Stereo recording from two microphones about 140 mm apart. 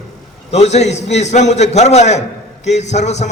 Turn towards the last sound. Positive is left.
turn(degrees=55)  # may be behind; listen again after turning